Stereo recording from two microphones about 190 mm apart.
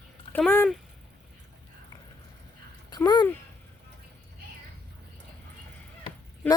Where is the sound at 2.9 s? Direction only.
20° left (ahead or behind).